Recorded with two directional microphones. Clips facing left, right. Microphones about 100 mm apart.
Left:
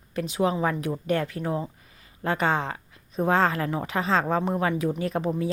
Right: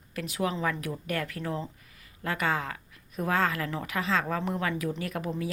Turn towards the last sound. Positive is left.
turn(degrees=25)  # may be behind; listen again after turning